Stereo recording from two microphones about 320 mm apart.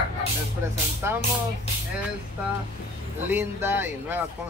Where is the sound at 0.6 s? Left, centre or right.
Centre.